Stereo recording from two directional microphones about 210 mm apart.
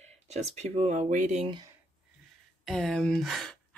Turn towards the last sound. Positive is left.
turn(degrees=0)  # may be behind; listen again after turning